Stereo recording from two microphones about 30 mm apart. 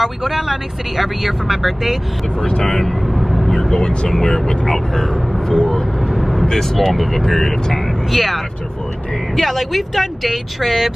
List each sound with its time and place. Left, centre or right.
0.0 s speech: centre
2.4 s speech: left
2.8 s vehicle: centre
3.5 s vehicle: centre
3.8 s speech: left
4.1 s speech: centre
6.1 s vehicle: centre
6.5 s speech: centre
7.6 s vehicle: centre
8.1 s speech: centre